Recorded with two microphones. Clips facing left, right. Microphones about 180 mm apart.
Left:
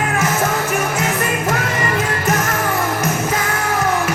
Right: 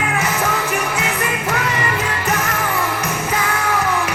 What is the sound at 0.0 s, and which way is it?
Music, 45° left (ahead or behind).